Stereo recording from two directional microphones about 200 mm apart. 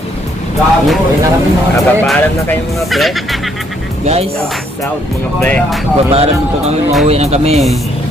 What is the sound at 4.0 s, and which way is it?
Speech, 30° right (ahead or behind).